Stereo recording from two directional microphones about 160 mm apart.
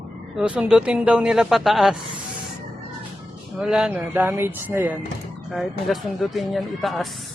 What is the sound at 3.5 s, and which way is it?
Speech, 5° right (ahead or behind).